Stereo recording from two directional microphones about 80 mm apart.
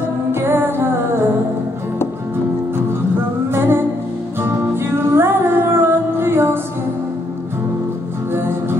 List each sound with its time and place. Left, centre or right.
0.3 s music: right
3.5 s music: right
8.4 s music: right